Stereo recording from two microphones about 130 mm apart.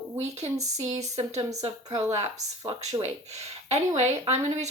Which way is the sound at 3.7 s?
55° right (ahead or behind).